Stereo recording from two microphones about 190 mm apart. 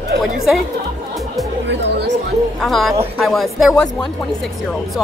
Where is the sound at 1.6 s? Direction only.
65° right (ahead or behind).